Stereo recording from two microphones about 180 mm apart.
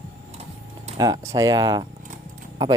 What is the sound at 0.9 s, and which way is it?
Speech, 20° right (ahead or behind).